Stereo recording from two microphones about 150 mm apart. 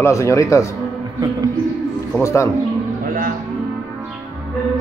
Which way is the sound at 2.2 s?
20° left (ahead or behind).